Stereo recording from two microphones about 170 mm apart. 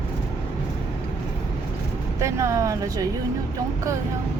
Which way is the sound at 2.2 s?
15° right (ahead or behind).